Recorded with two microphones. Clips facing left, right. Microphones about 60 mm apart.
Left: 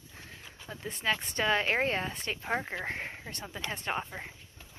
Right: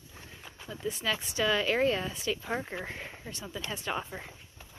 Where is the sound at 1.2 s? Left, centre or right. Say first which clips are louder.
Right 2 dB; left.